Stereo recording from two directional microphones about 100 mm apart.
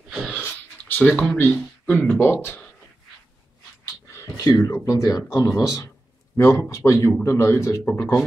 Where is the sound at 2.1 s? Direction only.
20° left (ahead or behind).